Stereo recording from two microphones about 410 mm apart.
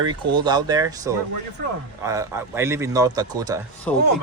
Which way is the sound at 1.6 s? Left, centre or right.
Right.